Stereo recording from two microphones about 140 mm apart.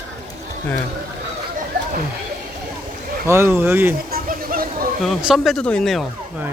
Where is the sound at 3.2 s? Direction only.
20° right (ahead or behind).